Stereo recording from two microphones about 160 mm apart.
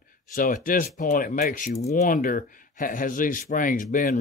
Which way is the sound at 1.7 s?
45° left (ahead or behind).